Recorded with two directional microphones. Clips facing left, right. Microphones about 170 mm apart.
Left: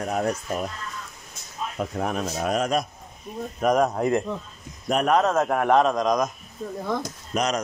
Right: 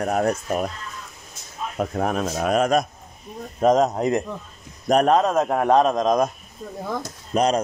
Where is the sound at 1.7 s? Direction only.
50° right (ahead or behind).